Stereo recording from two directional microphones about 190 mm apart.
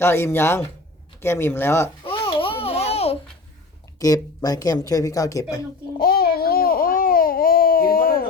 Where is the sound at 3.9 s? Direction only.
20° left (ahead or behind).